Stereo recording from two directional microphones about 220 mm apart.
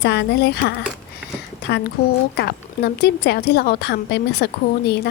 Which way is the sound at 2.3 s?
50° left (ahead or behind).